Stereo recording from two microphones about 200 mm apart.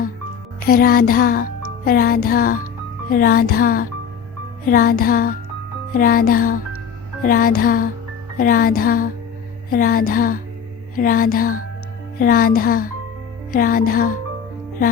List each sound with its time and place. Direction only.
0.7 s music: 50° left (ahead or behind)